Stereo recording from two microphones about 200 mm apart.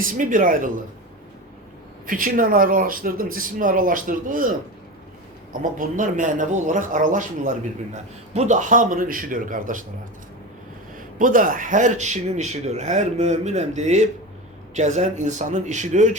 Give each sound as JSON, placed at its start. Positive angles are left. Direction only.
{"t": 0.2, "sound": "speech", "side_deg": -40}
{"t": 2.0, "sound": "speech", "side_deg": -45}
{"t": 5.7, "sound": "speech", "side_deg": -40}
{"t": 11.2, "sound": "speech", "side_deg": -45}